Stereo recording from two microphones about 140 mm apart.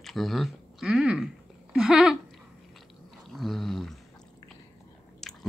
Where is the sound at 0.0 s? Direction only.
Centre (ahead or behind).